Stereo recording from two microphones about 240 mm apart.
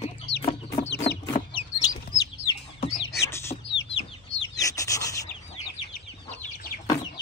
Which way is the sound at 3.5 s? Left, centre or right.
Left.